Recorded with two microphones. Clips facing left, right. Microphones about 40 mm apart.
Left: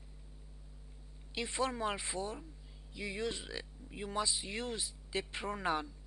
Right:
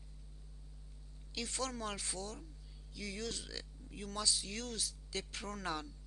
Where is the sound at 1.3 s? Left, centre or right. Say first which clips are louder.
Left 5 dB; left.